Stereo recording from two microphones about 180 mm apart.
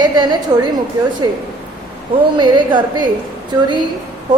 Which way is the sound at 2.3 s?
25° right (ahead or behind).